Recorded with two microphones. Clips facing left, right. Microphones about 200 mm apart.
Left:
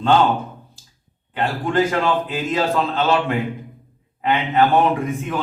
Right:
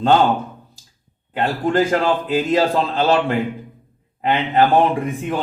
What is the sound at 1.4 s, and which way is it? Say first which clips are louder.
A man's voice: right 2 dB; 35° right (ahead or behind).